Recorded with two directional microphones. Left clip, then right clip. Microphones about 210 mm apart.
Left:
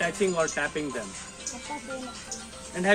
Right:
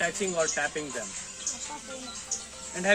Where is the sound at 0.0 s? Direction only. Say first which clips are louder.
Left 2 dB; centre (ahead or behind).